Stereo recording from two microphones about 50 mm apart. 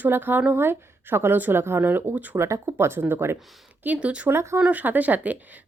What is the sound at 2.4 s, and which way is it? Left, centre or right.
Speech, right.